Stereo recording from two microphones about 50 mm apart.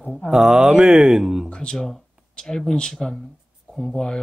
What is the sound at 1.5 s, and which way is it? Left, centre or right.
Speech, centre.